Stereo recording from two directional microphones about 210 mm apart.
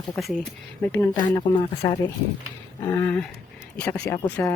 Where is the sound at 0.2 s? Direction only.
Centre (ahead or behind).